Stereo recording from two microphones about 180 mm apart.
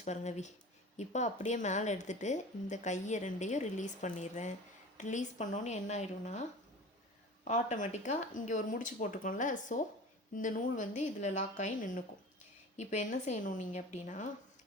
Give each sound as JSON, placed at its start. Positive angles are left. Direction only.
{"t": 0.0, "sound": "speech", "side_deg": 40}